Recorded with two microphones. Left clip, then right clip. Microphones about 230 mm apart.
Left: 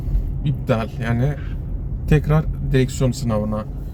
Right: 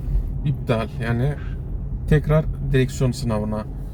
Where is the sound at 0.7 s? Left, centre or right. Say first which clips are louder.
Left 2 dB; centre.